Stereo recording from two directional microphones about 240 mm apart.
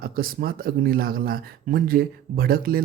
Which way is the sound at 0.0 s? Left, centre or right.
Right.